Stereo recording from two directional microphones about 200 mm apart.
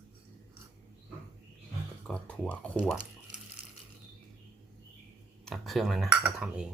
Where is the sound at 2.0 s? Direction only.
5° left (ahead or behind).